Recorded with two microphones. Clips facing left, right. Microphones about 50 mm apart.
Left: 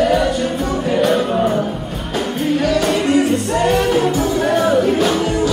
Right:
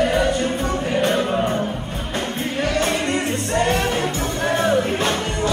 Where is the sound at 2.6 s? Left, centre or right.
Right.